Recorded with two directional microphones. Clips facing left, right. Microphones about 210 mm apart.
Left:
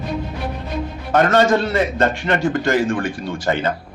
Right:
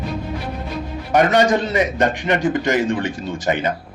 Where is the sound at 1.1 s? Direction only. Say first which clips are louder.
Even; 15° right (ahead or behind).